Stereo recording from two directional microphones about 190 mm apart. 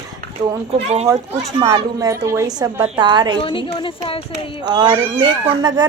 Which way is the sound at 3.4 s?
25° left (ahead or behind).